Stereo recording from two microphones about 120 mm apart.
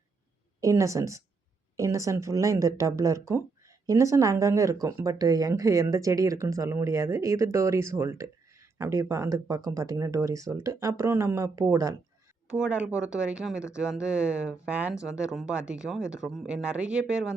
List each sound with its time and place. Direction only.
0.6 s speech: 25° right (ahead or behind)
12.5 s speech: 10° right (ahead or behind)